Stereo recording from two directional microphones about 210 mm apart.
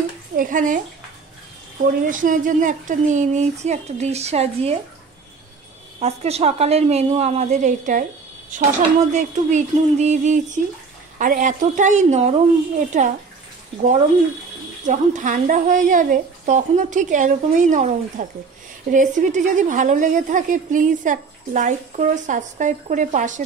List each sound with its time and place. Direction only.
0.4 s a woman's voice: 40° right (ahead or behind)
2.0 s a woman's voice: 40° right (ahead or behind)
5.9 s a woman's voice: 30° right (ahead or behind)
14.9 s a woman's voice: 35° right (ahead or behind)